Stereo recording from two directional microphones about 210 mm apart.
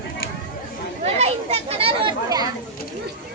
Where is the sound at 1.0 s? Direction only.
30° right (ahead or behind).